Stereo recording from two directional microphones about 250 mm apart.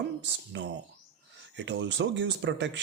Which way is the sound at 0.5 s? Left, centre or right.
Right.